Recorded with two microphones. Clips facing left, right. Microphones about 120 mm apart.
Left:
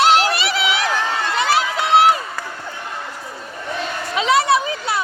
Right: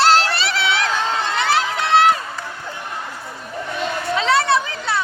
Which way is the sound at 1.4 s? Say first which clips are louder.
Left 2 dB; 15° left (ahead or behind).